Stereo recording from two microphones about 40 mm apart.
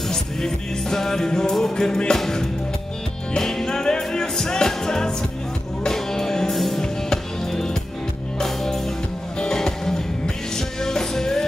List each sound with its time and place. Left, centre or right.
0.1 s music: centre
6.8 s music: centre